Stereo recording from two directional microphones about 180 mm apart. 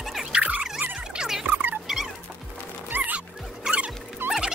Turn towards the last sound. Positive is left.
turn(degrees=-5)  # may be behind; listen again after turning